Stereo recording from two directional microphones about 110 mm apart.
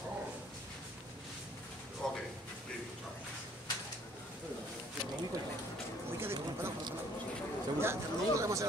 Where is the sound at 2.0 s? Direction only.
5° left (ahead or behind).